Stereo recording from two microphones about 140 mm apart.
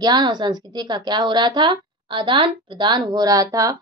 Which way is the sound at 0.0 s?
30° right (ahead or behind).